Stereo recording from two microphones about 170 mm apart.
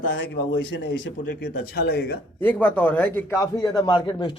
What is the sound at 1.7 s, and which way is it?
Speech, 85° left.